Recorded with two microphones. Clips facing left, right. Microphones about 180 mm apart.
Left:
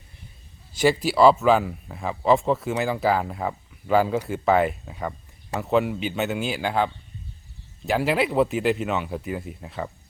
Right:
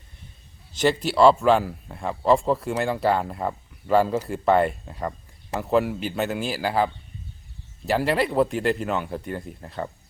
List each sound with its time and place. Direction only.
0.8 s speech: 5° left (ahead or behind)